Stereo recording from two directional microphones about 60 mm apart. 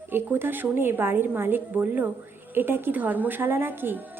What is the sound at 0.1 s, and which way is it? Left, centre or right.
A woman's voice, right.